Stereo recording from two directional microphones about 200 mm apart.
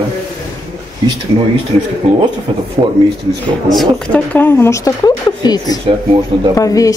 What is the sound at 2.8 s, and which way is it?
Speech, 30° right (ahead or behind).